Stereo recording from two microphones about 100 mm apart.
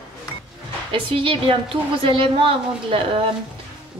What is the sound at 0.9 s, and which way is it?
A woman's voice, 60° right (ahead or behind).